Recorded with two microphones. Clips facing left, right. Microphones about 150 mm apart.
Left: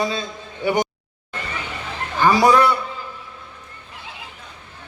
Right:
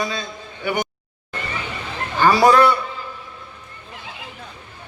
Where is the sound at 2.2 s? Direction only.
10° left (ahead or behind).